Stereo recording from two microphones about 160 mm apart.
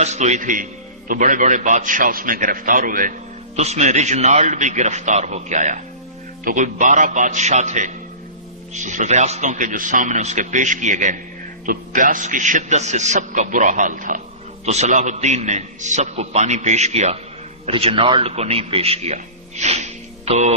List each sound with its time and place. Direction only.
0.0 s a man's voice: 45° right (ahead or behind)
3.5 s a man's voice: 45° right (ahead or behind)
14.6 s a man's voice: 45° right (ahead or behind)